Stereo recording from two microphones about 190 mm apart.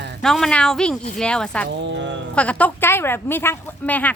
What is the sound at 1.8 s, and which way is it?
Speech, 70° right (ahead or behind).